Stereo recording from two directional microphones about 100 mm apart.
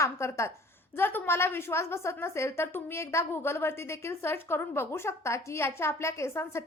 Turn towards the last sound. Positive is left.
turn(degrees=25)  # may be behind; listen again after turning